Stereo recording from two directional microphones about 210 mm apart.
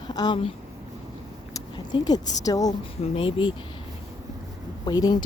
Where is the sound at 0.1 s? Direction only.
20° left (ahead or behind).